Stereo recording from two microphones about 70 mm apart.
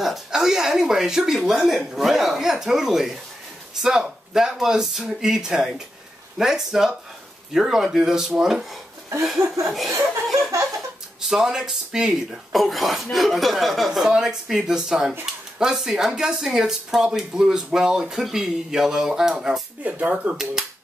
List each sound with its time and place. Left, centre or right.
0.0 s speech: centre
10.3 s a sound: right
11.1 s speech: centre
19.8 s speech: centre